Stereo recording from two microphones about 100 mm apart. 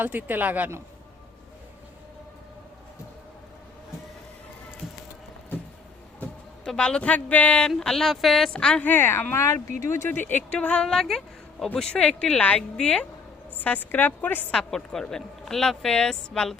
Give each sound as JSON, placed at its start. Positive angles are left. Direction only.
{"t": 0.0, "sound": "speech", "side_deg": -20}
{"t": 6.7, "sound": "a woman's voice", "side_deg": 10}
{"t": 8.9, "sound": "speech", "side_deg": 20}
{"t": 14.5, "sound": "a woman's voice", "side_deg": 5}